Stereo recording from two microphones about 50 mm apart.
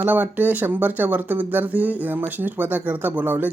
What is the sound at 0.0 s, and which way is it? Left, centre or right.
Speech, right.